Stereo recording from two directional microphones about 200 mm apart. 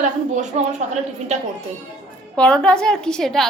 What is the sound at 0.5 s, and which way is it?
Speech, 35° right (ahead or behind).